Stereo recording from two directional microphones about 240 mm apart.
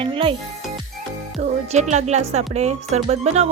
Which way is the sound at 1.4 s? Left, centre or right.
Right.